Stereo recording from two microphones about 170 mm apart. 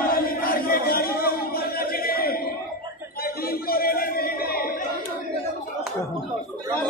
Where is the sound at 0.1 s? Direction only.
60° left (ahead or behind).